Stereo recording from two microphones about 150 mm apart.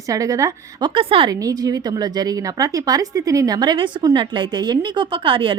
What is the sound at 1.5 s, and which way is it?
Speech, 25° right (ahead or behind).